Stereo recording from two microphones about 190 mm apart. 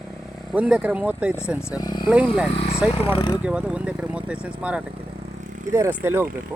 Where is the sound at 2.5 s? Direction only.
30° left (ahead or behind).